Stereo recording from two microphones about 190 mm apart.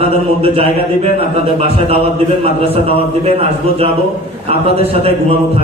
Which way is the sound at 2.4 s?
30° right (ahead or behind).